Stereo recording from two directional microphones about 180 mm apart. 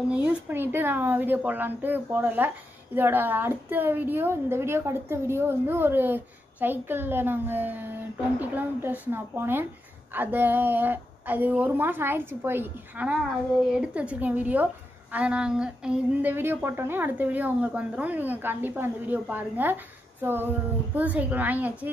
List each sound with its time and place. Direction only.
0.1 s speech: 10° right (ahead or behind)